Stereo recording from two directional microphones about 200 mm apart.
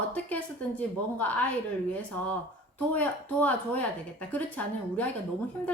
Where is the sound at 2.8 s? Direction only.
10° left (ahead or behind).